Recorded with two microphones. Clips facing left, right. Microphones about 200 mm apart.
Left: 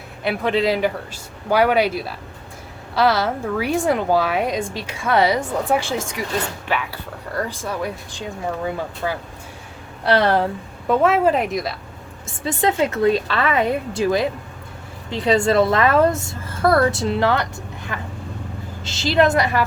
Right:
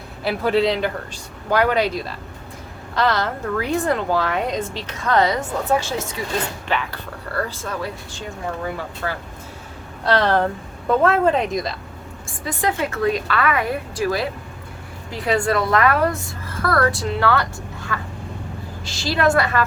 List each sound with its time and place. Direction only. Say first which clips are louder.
0.3 s speech: right 1 dB; centre (ahead or behind)
0.8 s a woman's voice: left 2 dB; 10° left (ahead or behind)
12.2 s a woman's voice: left 3 dB; 25° left (ahead or behind)